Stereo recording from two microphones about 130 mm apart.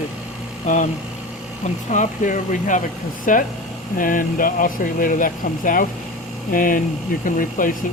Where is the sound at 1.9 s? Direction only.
75° left (ahead or behind).